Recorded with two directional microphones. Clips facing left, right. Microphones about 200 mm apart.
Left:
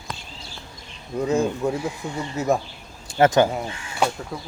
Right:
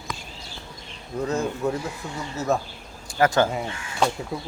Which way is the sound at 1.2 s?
10° left (ahead or behind).